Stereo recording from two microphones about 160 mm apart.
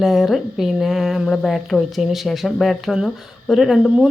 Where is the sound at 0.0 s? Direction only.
Centre (ahead or behind).